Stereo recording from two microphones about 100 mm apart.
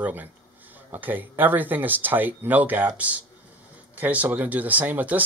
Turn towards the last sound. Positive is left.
turn(degrees=-15)  # may be behind; listen again after turning